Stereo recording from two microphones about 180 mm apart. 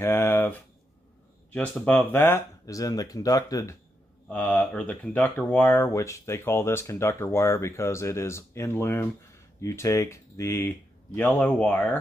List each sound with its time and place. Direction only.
0.0 s speech: 15° left (ahead or behind)
4.3 s speech: 5° left (ahead or behind)